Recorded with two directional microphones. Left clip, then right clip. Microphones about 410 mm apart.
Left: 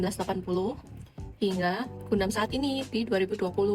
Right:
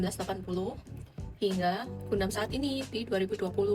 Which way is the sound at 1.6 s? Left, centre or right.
Centre.